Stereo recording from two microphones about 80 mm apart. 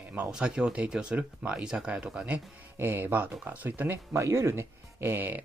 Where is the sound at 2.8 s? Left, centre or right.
Right.